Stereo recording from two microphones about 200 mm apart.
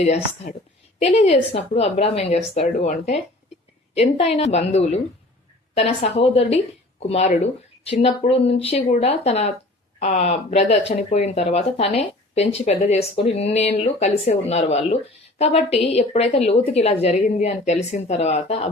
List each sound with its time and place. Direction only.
0.0 s speech: 35° left (ahead or behind)